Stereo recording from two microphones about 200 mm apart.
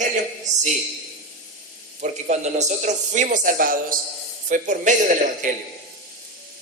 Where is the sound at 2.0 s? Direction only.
35° right (ahead or behind).